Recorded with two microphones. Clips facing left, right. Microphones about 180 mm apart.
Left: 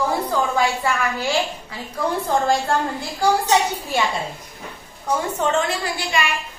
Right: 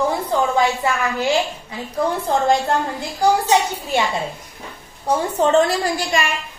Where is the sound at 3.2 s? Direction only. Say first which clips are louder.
Right 2 dB; 20° right (ahead or behind).